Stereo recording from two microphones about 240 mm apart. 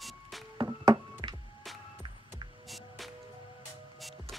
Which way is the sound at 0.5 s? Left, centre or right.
Centre.